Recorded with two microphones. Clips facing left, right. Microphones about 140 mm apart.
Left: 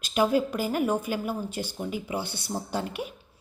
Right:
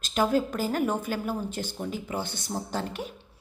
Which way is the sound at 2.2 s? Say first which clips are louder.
Even; 50° right (ahead or behind).